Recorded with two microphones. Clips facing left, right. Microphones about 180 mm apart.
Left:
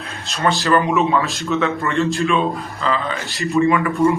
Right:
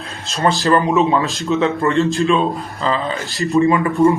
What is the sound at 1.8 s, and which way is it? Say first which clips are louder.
Speech: right 3 dB; 35° right (ahead or behind).